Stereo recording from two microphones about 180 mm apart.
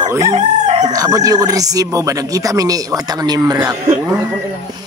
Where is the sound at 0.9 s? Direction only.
20° right (ahead or behind).